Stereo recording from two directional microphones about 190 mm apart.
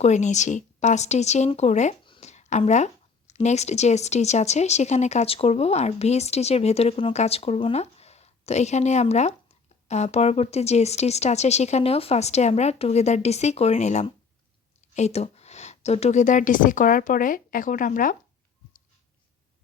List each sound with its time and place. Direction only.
0.0 s a woman's voice: 40° left (ahead or behind)